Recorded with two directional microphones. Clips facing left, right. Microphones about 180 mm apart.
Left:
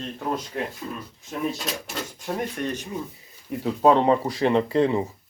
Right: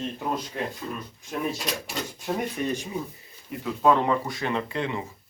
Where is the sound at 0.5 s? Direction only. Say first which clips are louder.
Left 1 dB; centre (ahead or behind).